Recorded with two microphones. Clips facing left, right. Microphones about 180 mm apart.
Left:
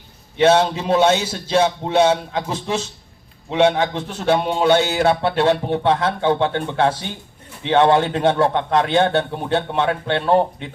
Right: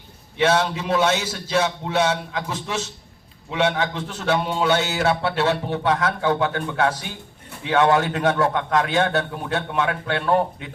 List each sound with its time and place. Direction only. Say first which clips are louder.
0.3 s a man's voice: left 5 dB; 25° left (ahead or behind)
5.0 s a man's voice: left 4 dB; 20° left (ahead or behind)